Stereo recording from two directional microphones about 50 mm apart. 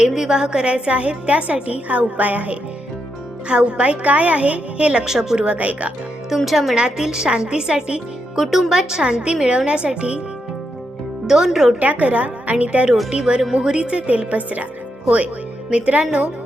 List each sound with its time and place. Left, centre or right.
0.0 s a woman's voice: centre; by 2.6 s right
3.5 s a woman's voice: right
5.5 s a woman's voice: right
6.3 s speech: centre
6.7 s a woman's voice: centre
8.4 s a woman's voice: centre
11.3 s a woman's voice: centre
11.8 s a woman's voice: right
15.7 s a woman's voice: right